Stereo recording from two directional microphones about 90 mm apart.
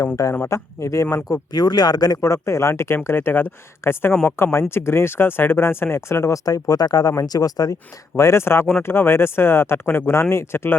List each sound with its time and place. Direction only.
0.4 s speech: 35° left (ahead or behind)
1.1 s speech: 45° left (ahead or behind)
8.1 s speech: 30° left (ahead or behind)